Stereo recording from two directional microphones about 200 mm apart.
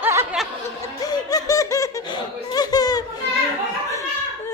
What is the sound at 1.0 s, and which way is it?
Laughter, 20° left (ahead or behind).